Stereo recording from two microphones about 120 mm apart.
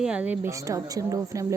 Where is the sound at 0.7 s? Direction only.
25° right (ahead or behind).